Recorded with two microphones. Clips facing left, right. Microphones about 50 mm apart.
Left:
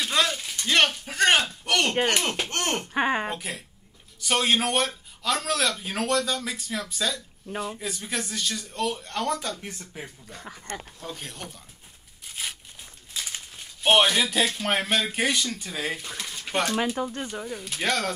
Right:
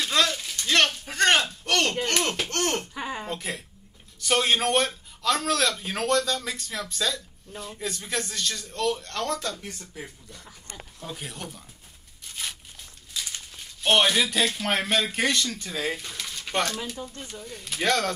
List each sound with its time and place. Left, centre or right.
0.0 s a sound: centre
2.0 s speech: centre
2.9 s speech: left
4.2 s a man's voice: centre; by 10.0 s left
10.3 s speech: left
11.0 s a man's voice: centre
13.1 s a sound: left
14.0 s a man's voice: centre
16.1 s speech: centre
16.8 s speech: left
17.1 s speech: left
17.6 s a man's voice: centre